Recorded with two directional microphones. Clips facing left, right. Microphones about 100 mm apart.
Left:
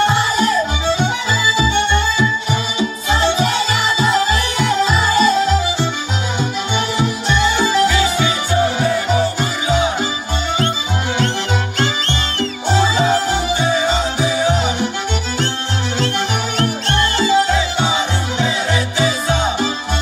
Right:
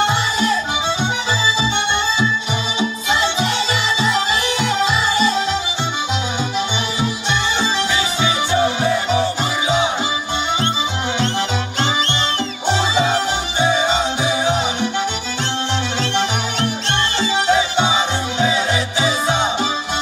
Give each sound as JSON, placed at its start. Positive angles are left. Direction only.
{"t": 0.1, "sound": "music", "side_deg": 40}
{"t": 1.6, "sound": "music", "side_deg": -25}
{"t": 3.1, "sound": "music", "side_deg": 40}
{"t": 7.0, "sound": "music", "side_deg": -20}
{"t": 13.6, "sound": "music", "side_deg": -25}
{"t": 16.5, "sound": "music", "side_deg": -25}